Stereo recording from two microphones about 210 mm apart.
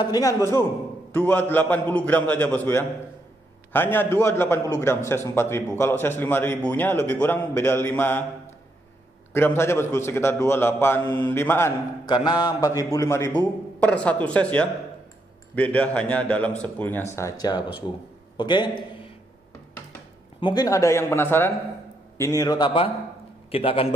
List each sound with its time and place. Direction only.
0.0 s a man's voice: 15° left (ahead or behind)
9.3 s a man's voice: 10° left (ahead or behind)
20.3 s a man's voice: 20° left (ahead or behind)